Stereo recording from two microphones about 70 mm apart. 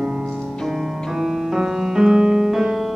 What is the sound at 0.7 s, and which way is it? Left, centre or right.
Keyboard, centre.